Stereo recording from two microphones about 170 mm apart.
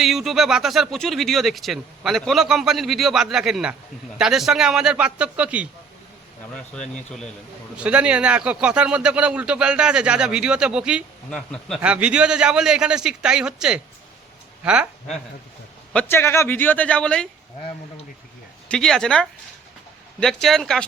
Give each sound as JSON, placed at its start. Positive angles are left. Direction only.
{"t": 0.0, "sound": "speech", "side_deg": 0}
{"t": 7.8, "sound": "speech", "side_deg": -5}
{"t": 11.3, "sound": "speech", "side_deg": 5}
{"t": 11.8, "sound": "speech", "side_deg": -5}
{"t": 15.9, "sound": "a man's voice", "side_deg": 10}
{"t": 18.7, "sound": "speech", "side_deg": 5}